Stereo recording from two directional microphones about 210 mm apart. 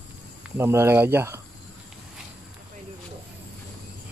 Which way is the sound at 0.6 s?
10° right (ahead or behind).